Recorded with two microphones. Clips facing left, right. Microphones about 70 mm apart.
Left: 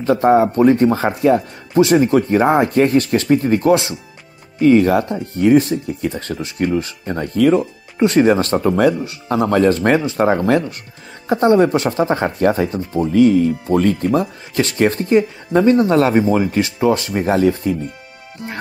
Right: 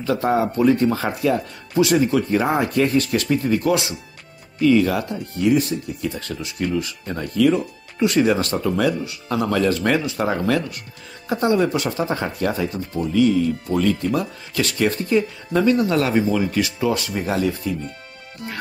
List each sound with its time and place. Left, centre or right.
0.0 s speech: left
14.0 s speech: left
18.4 s speech: left